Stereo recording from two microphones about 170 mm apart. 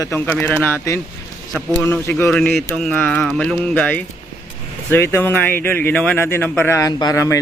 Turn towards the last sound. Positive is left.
turn(degrees=20)  # may be behind; listen again after turning